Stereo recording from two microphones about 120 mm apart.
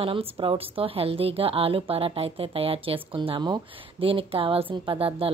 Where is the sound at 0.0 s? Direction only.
50° right (ahead or behind).